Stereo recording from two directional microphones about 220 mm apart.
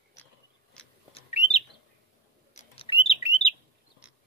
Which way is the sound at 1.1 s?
30° left (ahead or behind).